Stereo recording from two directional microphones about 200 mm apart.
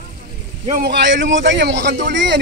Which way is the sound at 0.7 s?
50° right (ahead or behind).